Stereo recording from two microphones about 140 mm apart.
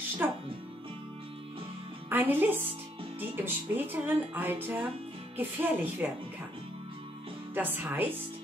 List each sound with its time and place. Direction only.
0.2 s music: 15° right (ahead or behind)
2.0 s a woman's voice: 15° right (ahead or behind)
7.5 s speech: 15° right (ahead or behind)